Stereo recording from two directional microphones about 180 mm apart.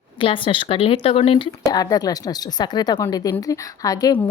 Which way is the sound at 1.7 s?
20° left (ahead or behind).